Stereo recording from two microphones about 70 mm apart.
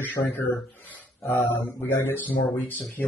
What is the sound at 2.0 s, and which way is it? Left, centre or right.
Speech, left.